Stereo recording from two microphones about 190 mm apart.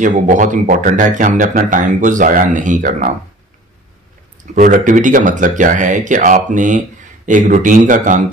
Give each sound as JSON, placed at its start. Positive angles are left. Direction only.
{"t": 0.0, "sound": "speech", "side_deg": -40}
{"t": 4.6, "sound": "speech", "side_deg": -40}